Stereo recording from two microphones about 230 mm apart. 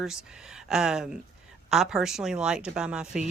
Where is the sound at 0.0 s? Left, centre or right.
Centre.